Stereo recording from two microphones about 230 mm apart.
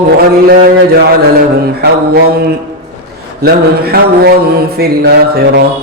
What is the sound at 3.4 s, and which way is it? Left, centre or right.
Mantra, right.